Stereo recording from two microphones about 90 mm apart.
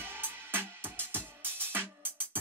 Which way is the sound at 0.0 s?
25° right (ahead or behind).